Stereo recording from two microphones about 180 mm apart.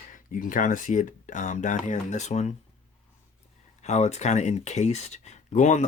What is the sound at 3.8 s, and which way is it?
Speech, 40° left (ahead or behind).